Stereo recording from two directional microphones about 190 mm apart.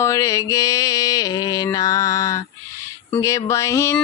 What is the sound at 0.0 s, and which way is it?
Mantra, 15° left (ahead or behind).